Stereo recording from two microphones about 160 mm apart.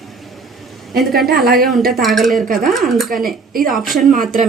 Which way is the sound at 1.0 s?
Centre (ahead or behind).